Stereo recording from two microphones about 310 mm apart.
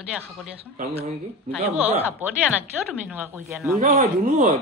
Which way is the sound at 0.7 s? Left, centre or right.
Centre.